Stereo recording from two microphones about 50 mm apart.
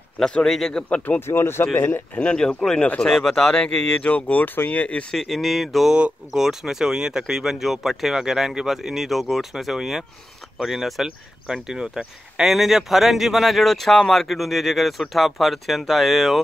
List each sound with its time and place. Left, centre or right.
0.3 s speech: centre
0.8 s speech: left
1.2 s speech: left
1.8 s speech: left
2.3 s speech: centre; by 4.8 s left
5.1 s speech: centre
5.9 s speech: right
6.3 s speech: centre